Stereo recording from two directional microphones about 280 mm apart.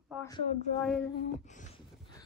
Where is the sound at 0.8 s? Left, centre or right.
Centre.